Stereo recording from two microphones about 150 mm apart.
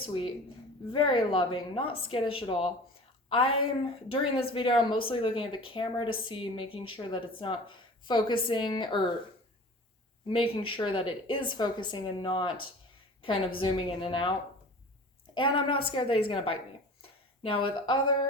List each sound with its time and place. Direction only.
0.0 s a woman's voice: 35° left (ahead or behind)
10.2 s speech: 35° left (ahead or behind)
15.4 s speech: 35° left (ahead or behind)
17.0 s a sound: 35° left (ahead or behind)